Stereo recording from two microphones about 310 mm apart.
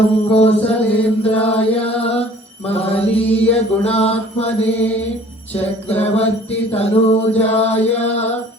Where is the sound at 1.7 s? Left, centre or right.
Centre.